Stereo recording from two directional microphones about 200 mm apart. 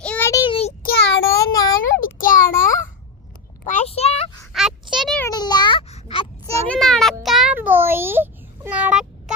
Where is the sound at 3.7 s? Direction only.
35° left (ahead or behind).